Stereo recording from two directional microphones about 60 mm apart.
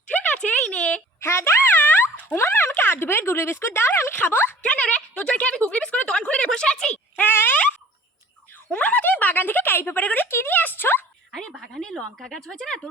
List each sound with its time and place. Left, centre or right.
0.1 s a sound: left
1.2 s a sound: left
1.7 s boing: left
2.3 s speech: left
4.6 s a woman's voice: centre
7.2 s speech: left
8.7 s speech: left
10.2 s speech: left
11.5 s speech: centre
11.8 s speech: centre